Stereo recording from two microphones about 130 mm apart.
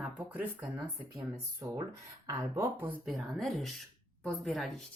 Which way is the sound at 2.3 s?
20° right (ahead or behind).